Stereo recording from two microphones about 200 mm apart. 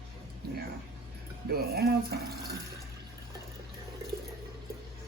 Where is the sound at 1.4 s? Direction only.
50° right (ahead or behind).